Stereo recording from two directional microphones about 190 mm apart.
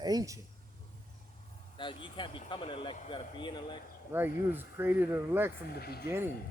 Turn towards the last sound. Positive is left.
turn(degrees=-10)  # may be behind; listen again after turning